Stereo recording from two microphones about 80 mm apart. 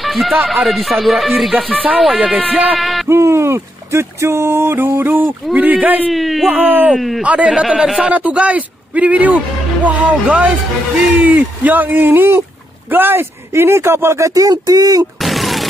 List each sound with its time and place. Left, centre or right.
0.0 s speech: centre
1.7 s speech: centre
2.8 s a sound: centre
3.1 s a sound: right
5.5 s speech: centre
6.1 s speech: centre
6.4 s speech: right
7.0 s speech: centre
7.2 s speech: centre
8.1 s speech: centre
12.9 s a sound: right
15.1 s a sound: centre